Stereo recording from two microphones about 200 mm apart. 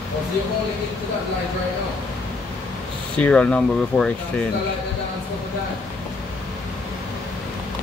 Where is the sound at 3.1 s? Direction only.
5° left (ahead or behind).